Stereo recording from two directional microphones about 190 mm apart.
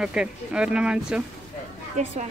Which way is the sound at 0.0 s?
5° right (ahead or behind).